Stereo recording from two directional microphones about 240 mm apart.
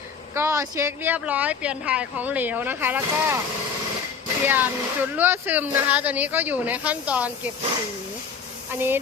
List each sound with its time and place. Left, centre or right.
0.3 s speech: centre
4.4 s speech: centre
8.7 s speech: centre